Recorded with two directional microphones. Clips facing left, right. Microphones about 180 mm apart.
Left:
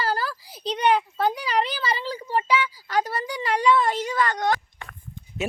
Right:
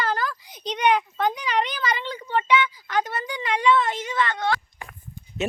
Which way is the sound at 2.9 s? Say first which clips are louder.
Left 1 dB; 35° left (ahead or behind).